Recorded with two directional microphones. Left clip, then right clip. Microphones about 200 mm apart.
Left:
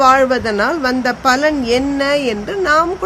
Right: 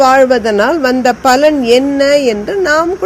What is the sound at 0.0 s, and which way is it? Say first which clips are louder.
A woman's voice: right 4 dB; 15° right (ahead or behind).